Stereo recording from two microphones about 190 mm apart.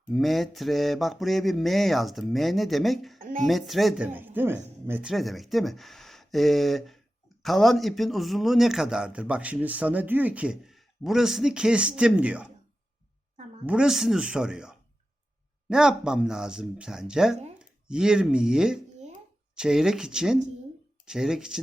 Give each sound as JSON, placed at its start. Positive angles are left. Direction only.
{"t": 0.1, "sound": "speech", "side_deg": 0}
{"t": 3.2, "sound": "a sound", "side_deg": -45}
{"t": 3.4, "sound": "speech", "side_deg": 0}
{"t": 13.7, "sound": "speech", "side_deg": -5}